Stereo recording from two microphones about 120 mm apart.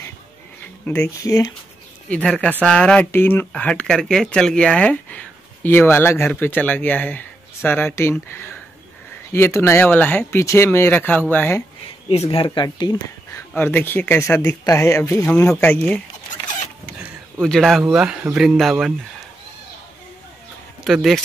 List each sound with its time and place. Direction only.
0.8 s speech: 15° left (ahead or behind)
1.2 s speech: 30° left (ahead or behind)
2.0 s speech: 10° left (ahead or behind)
12.1 s speech: 55° left (ahead or behind); by 12.9 s 40° left (ahead or behind)
13.6 s speech: 15° left (ahead or behind)
15.0 s speech: 15° left (ahead or behind)
17.4 s speech: 5° left (ahead or behind)
20.8 s speech: centre (ahead or behind)